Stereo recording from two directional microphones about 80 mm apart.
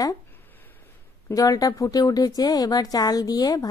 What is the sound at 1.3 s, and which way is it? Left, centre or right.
Speech, left.